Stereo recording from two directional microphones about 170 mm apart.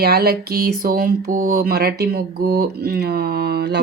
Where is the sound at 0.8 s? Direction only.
55° right (ahead or behind).